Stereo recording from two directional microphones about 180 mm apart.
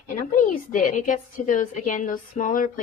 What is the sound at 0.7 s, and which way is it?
Speech, 45° left (ahead or behind).